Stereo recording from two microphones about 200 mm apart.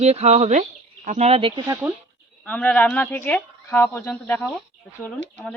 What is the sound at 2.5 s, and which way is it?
Speech, 5° left (ahead or behind).